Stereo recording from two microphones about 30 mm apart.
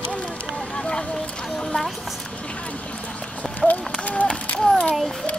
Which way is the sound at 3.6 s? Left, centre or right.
Centre.